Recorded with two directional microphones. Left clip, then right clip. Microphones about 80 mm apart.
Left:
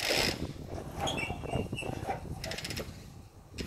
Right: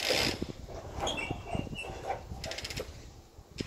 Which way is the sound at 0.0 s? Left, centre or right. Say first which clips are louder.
Even; left.